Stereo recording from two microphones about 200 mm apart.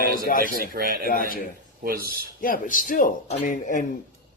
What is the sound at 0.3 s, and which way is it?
Speech, 45° left (ahead or behind).